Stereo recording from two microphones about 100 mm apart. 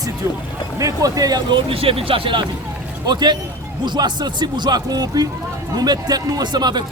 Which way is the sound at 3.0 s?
45° right (ahead or behind).